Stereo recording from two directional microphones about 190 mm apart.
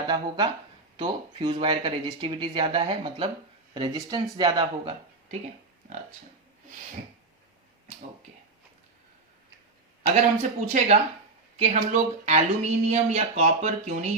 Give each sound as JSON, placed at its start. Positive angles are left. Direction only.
{"t": 0.1, "sound": "speech", "side_deg": -25}
{"t": 10.2, "sound": "speech", "side_deg": -40}